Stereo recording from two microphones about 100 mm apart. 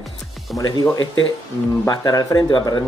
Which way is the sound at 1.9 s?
45° left (ahead or behind).